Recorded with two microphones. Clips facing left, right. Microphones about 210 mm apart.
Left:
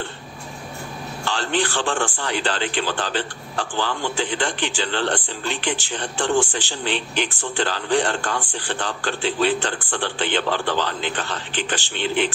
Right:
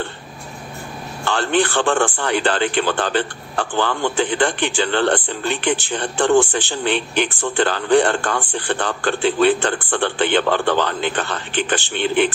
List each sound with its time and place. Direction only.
1.2 s a man's voice: 55° right (ahead or behind)